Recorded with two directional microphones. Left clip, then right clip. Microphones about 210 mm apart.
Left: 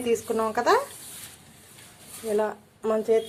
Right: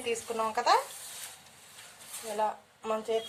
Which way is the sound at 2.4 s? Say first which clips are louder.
Left 1 dB; 30° left (ahead or behind).